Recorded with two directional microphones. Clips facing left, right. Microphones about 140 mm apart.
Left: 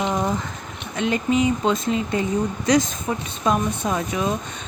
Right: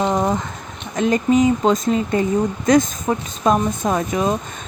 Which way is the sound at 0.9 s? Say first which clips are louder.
Right 5 dB; 40° right (ahead or behind).